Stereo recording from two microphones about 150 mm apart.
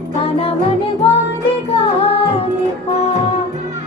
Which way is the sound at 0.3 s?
40° left (ahead or behind).